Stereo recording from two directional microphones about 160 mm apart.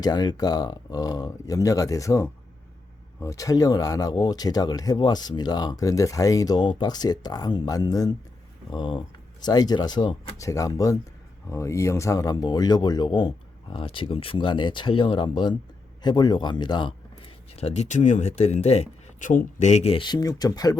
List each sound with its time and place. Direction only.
0.0 s speech: 25° left (ahead or behind)
17.5 s speech: 40° left (ahead or behind); by 20.7 s 25° left (ahead or behind)